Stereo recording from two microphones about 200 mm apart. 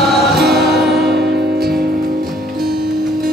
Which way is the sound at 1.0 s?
55° right (ahead or behind).